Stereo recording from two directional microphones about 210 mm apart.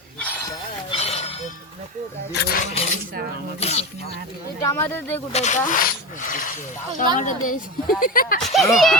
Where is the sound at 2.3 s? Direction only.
50° left (ahead or behind).